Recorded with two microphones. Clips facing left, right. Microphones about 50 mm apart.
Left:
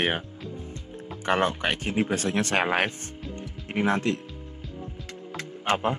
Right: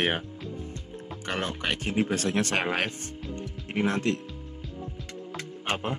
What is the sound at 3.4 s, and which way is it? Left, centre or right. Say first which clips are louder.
Music: left 1 dB; centre.